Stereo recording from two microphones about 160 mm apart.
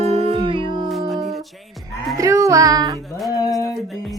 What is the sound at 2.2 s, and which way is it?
Speech, 20° right (ahead or behind).